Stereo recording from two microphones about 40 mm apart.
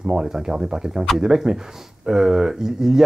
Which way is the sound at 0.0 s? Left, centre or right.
Centre.